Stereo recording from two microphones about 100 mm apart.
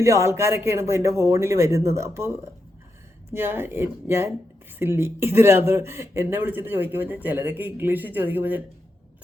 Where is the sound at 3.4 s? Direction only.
20° right (ahead or behind).